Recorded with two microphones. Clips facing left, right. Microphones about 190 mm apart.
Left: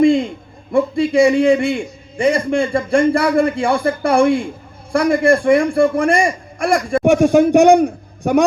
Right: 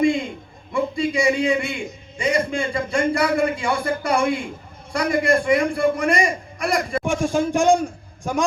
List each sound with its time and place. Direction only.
0.7 s a man's voice: 55° left (ahead or behind)